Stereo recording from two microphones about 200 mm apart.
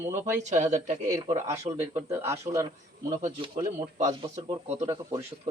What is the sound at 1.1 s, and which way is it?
Speech, 15° right (ahead or behind).